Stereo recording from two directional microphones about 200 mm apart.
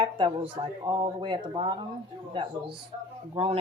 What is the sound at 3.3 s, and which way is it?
Speech, 30° right (ahead or behind).